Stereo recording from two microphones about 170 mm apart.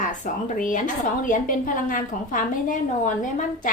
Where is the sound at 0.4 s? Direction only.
50° left (ahead or behind).